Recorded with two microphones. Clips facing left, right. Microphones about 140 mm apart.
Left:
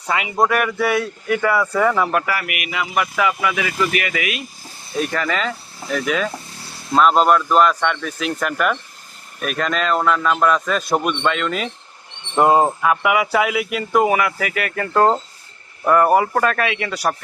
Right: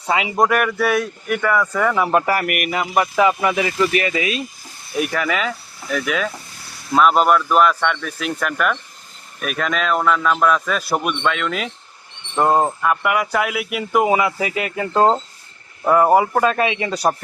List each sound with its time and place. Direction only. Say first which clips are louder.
0.1 s a man's voice: right 2 dB; 25° right (ahead or behind)
0.8 s speech: left 1 dB; 20° left (ahead or behind)
1.4 s speech: left 1 dB; 10° left (ahead or behind)
2.0 s a man's voice: right 2 dB; 25° right (ahead or behind)
2.2 s speech: right 5 dB; 45° right (ahead or behind)
4.9 s speech: right 1 dB; 10° right (ahead or behind)
14.1 s a man's voice: right 1 dB; 20° right (ahead or behind)